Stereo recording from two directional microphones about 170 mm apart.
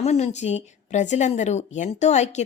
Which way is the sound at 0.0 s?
40° left (ahead or behind).